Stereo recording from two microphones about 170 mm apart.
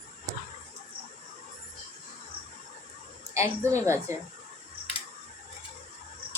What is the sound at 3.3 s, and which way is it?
Speech, 15° right (ahead or behind).